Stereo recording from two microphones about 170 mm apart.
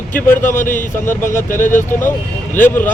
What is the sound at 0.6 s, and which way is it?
Speech, 50° left (ahead or behind).